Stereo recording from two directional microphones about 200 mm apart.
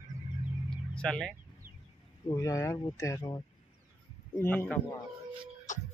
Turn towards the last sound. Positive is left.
turn(degrees=10)  # may be behind; listen again after turning